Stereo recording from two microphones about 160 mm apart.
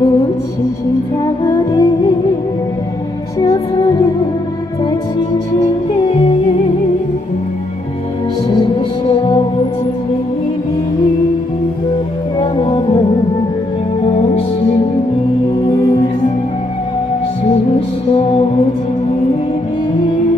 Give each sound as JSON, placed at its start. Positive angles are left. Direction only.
{"t": 1.4, "sound": "music", "side_deg": 25}
{"t": 3.3, "sound": "music", "side_deg": 30}
{"t": 8.7, "sound": "music", "side_deg": 30}
{"t": 12.4, "sound": "music", "side_deg": 30}
{"t": 15.6, "sound": "music", "side_deg": 30}
{"t": 17.7, "sound": "music", "side_deg": 35}